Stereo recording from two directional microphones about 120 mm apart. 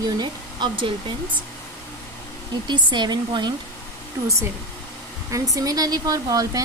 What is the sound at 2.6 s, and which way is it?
Speech, 40° right (ahead or behind).